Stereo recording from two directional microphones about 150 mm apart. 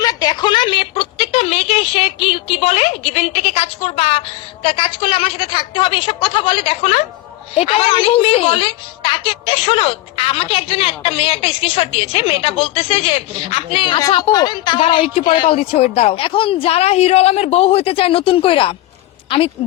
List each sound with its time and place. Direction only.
0.0 s a woman's voice: 25° left (ahead or behind)